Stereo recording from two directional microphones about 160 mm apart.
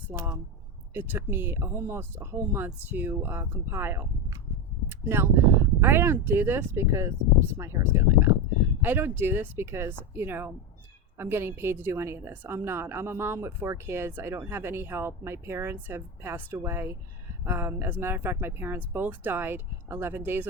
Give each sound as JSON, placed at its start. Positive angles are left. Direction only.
{"t": 0.1, "sound": "a woman's voice", "side_deg": -20}